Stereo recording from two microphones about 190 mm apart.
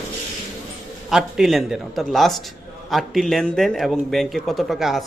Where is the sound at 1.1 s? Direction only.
Centre (ahead or behind).